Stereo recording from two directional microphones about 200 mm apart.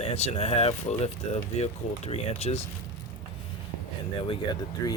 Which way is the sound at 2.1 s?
30° left (ahead or behind).